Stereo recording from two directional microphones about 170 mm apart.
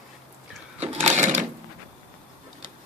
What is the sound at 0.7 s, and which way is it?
Sewing machine, 40° right (ahead or behind).